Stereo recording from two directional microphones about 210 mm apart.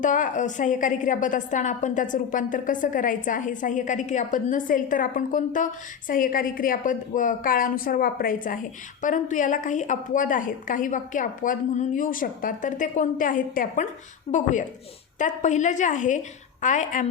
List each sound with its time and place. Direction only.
0.0 s a woman's voice: 40° left (ahead or behind)